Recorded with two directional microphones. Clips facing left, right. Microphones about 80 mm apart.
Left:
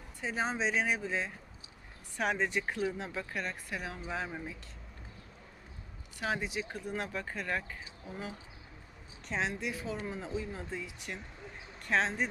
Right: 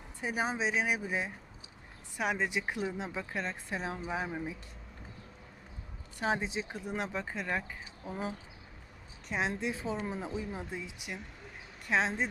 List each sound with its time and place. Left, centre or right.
0.2 s speech: centre
4.1 s speech: centre
6.1 s speech: right
9.3 s speech: right